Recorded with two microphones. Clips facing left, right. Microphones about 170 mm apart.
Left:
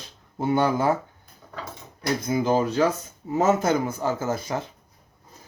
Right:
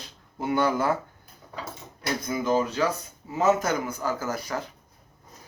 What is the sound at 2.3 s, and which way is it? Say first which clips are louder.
Speech: left 2 dB; 30° left (ahead or behind).